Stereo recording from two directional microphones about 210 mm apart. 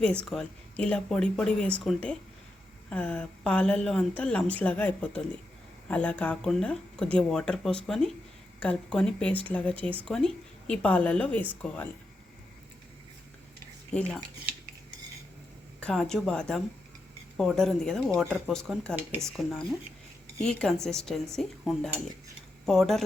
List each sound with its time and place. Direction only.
0.3 s a woman's voice: 5° left (ahead or behind)
15.8 s a woman's voice: 5° left (ahead or behind)